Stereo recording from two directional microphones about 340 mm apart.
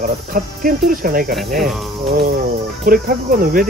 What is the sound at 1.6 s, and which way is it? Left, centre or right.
Speech, centre.